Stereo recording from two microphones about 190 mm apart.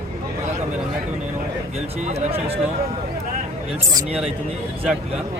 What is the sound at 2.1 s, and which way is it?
Speech, 30° right (ahead or behind).